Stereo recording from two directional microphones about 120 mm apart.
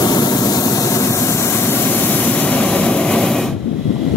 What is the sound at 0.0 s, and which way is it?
Vehicle, 35° left (ahead or behind).